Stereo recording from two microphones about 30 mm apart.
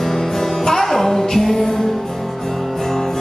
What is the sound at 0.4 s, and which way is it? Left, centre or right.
Music, centre.